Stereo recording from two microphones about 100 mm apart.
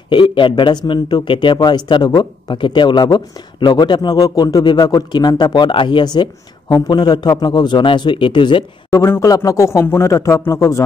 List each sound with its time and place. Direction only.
0.1 s speech: 55° left (ahead or behind)
8.9 s a man's voice: 25° left (ahead or behind)